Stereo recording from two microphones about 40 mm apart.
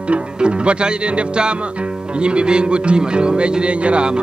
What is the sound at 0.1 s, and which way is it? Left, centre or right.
Speech, right.